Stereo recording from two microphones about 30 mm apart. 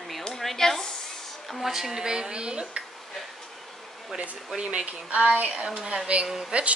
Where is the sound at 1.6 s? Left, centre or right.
Centre; by 2.8 s right.